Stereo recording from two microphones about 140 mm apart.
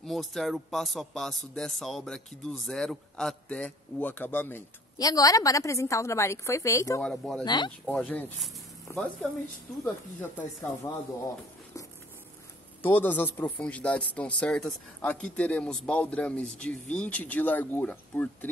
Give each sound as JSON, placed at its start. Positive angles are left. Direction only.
{"t": 0.0, "sound": "speech", "side_deg": 0}
{"t": 4.9, "sound": "a woman's voice", "side_deg": 25}
{"t": 7.0, "sound": "speech", "side_deg": 5}
{"t": 7.4, "sound": "speech", "side_deg": 30}
{"t": 7.8, "sound": "a woman's voice", "side_deg": 5}
{"t": 12.8, "sound": "speech", "side_deg": 15}